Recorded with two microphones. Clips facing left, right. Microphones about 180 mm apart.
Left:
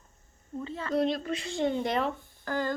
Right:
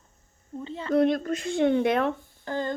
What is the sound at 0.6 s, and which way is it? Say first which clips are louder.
Speech: right 3 dB; 30° right (ahead or behind).